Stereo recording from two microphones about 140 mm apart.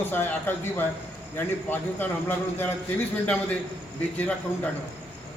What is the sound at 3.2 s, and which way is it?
A man's voice, 10° left (ahead or behind).